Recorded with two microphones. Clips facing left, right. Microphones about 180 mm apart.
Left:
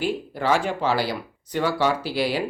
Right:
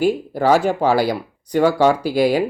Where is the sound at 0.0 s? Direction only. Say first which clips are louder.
Right 8 dB; 45° right (ahead or behind).